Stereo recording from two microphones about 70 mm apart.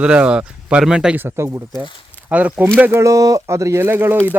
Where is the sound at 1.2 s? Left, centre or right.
Right.